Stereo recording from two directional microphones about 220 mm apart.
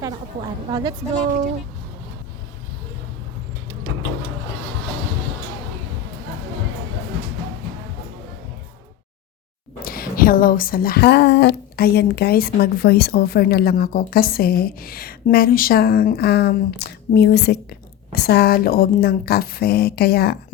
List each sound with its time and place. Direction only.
0.7 s a woman's voice: 20° right (ahead or behind)
9.8 s speech: 40° left (ahead or behind)